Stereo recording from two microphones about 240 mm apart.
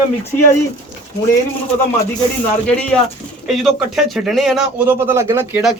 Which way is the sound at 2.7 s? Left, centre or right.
Centre.